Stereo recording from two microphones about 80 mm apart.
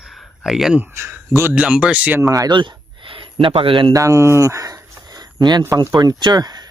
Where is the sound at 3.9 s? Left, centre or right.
Right.